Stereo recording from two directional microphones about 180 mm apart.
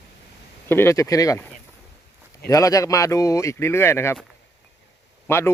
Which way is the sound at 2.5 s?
20° left (ahead or behind).